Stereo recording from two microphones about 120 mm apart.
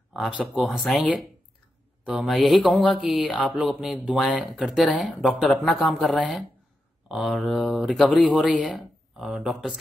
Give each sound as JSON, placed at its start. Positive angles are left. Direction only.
{"t": 0.1, "sound": "speech", "side_deg": -5}
{"t": 3.4, "sound": "a sound", "side_deg": -10}
{"t": 4.2, "sound": "speech", "side_deg": 0}